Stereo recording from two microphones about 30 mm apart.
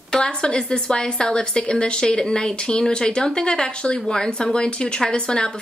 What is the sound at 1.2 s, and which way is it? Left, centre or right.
A woman's voice, left.